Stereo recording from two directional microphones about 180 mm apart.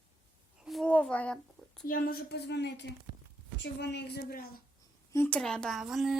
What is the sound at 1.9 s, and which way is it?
A woman's voice, 55° left (ahead or behind).